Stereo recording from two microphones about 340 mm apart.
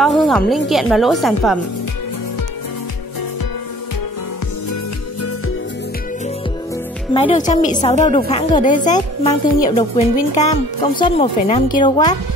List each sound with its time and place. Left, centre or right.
0.0 s speech: centre
7.2 s speech: centre